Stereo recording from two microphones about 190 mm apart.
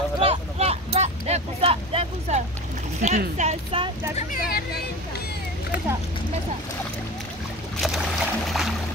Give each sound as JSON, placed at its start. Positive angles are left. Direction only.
{"t": 0.2, "sound": "vehicle", "side_deg": -30}
{"t": 3.0, "sound": "speech", "side_deg": -40}
{"t": 4.2, "sound": "speech", "side_deg": 45}
{"t": 7.8, "sound": "boat", "side_deg": 0}